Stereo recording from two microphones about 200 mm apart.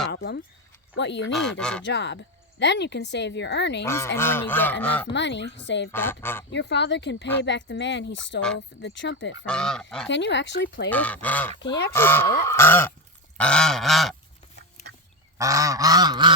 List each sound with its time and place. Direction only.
0.1 s speech: 55° left (ahead or behind)
1.3 s goose: centre (ahead or behind)
1.8 s speech: 60° left (ahead or behind)
3.8 s honk: 15° left (ahead or behind)
5.1 s speech: 60° left (ahead or behind)
5.9 s honk: 10° left (ahead or behind)
6.5 s speech: 60° left (ahead or behind)
9.5 s goose: 5° left (ahead or behind)
10.1 s speech: 65° left (ahead or behind)
10.8 s honk: 5° left (ahead or behind)
13.3 s goose: 5° left (ahead or behind)
14.8 s duck: 35° left (ahead or behind)
15.4 s goose: 15° right (ahead or behind)